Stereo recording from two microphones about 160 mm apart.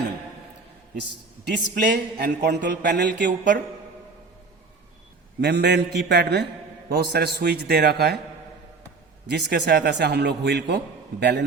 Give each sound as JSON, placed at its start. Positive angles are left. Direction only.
{"t": 1.7, "sound": "a man's voice", "side_deg": -80}
{"t": 5.4, "sound": "a man's voice", "side_deg": -90}
{"t": 9.2, "sound": "a man's voice", "side_deg": -90}